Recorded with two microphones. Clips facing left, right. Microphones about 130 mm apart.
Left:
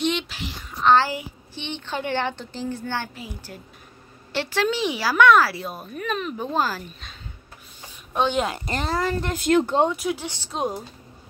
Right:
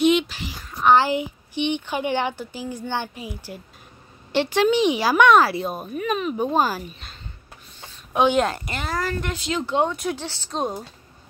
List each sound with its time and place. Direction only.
0.0 s a woman's voice: 5° right (ahead or behind); by 5.9 s 20° right (ahead or behind)
5.9 s speech: 5° right (ahead or behind)
6.3 s speech: 15° right (ahead or behind)
8.1 s a woman's voice: 10° right (ahead or behind)
8.6 s speech: 30° left (ahead or behind)
9.3 s speech: 50° left (ahead or behind)
9.8 s speech: 5° left (ahead or behind)